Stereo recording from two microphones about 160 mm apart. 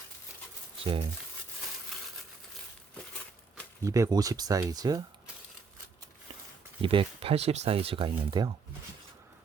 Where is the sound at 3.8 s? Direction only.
20° right (ahead or behind).